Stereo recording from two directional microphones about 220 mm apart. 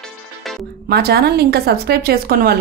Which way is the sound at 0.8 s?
45° right (ahead or behind).